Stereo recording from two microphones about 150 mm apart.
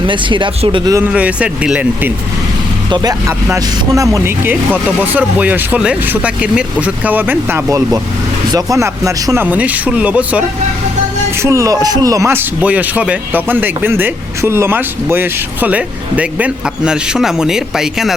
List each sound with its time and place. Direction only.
0.1 s speech: 35° right (ahead or behind)
0.9 s speech: 10° right (ahead or behind)
2.9 s speech: 25° right (ahead or behind)
4.7 s speech: 10° right (ahead or behind)
11.4 s speech: 20° right (ahead or behind); by 18.1 s 5° right (ahead or behind)